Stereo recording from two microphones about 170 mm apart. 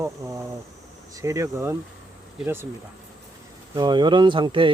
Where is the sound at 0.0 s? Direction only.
20° right (ahead or behind).